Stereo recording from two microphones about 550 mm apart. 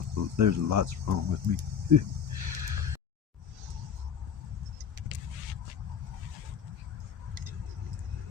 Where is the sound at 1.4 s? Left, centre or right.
Right.